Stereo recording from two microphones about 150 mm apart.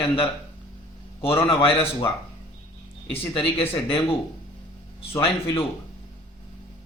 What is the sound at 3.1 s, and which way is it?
Speech, 40° left (ahead or behind).